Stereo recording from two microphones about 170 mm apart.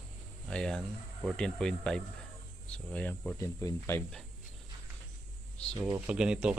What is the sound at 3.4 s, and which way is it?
Speech, 20° left (ahead or behind).